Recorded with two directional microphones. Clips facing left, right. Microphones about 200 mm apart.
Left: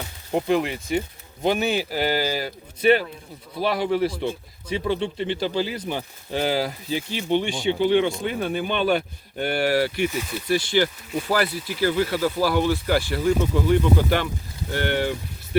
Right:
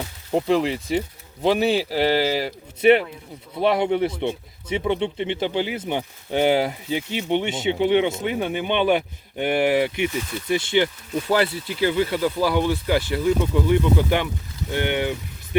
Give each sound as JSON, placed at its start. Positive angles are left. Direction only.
{"t": 0.3, "sound": "speech", "side_deg": -30}